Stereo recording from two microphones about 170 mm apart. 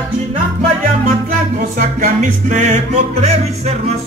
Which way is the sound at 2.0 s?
45° right (ahead or behind).